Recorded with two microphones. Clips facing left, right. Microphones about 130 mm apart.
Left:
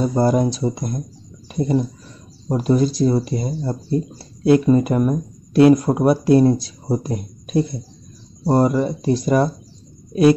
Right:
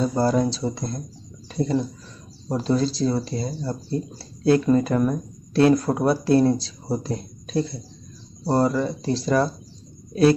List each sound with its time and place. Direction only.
0.0 s speech: 15° left (ahead or behind)